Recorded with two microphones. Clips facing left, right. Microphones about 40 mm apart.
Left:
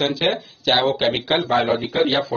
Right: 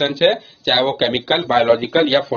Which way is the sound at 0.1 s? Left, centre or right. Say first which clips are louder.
Right 6 dB; right.